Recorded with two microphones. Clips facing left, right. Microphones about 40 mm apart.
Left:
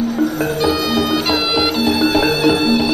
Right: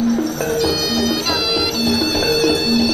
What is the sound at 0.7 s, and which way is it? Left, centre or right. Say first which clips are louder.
Music: left 2 dB; left.